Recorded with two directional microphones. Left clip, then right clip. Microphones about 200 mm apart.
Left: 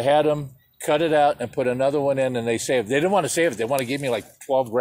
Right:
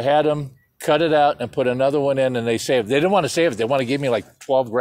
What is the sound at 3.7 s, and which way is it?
Speech, 45° right (ahead or behind).